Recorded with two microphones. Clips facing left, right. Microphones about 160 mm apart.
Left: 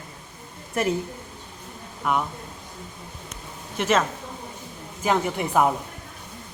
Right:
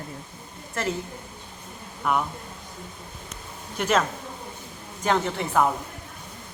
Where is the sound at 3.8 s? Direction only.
Centre (ahead or behind).